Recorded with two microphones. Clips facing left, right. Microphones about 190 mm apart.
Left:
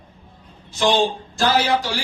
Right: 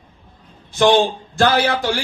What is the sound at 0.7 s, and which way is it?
A man's voice, 55° right (ahead or behind).